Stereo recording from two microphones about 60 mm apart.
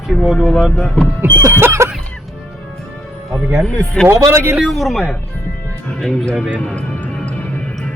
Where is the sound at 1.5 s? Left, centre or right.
Right.